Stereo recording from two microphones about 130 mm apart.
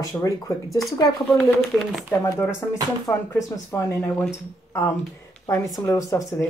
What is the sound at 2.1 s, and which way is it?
Speech, 20° left (ahead or behind).